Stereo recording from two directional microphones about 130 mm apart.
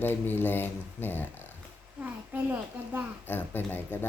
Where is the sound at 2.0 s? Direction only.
10° right (ahead or behind).